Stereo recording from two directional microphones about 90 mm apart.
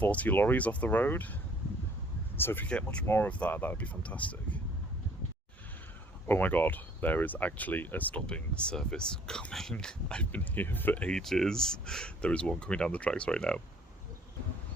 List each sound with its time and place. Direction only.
0.0 s speech: 15° left (ahead or behind)
2.6 s speech: 10° left (ahead or behind)
6.2 s speech: 20° left (ahead or behind)